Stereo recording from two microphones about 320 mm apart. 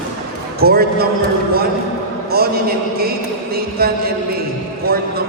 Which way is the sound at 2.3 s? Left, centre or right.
Right.